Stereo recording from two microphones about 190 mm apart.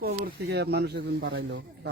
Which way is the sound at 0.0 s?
55° right (ahead or behind).